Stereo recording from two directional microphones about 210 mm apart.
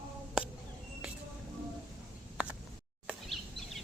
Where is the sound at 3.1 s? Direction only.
Centre (ahead or behind).